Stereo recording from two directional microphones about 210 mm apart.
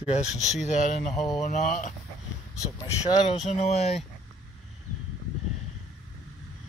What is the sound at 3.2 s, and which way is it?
Speech, 30° left (ahead or behind).